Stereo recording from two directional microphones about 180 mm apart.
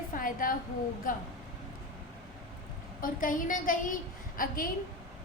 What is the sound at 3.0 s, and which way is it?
A woman's voice, 50° left (ahead or behind).